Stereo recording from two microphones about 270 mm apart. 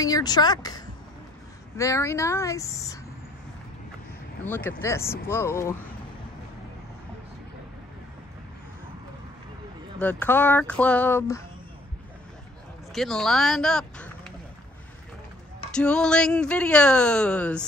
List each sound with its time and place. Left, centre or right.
0.0 s speech: centre
4.5 s speech: centre
9.9 s speech: centre
12.9 s speech: centre
15.7 s speech: centre